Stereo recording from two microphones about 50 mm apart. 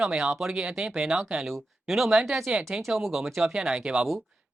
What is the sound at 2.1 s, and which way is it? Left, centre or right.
Speech, centre.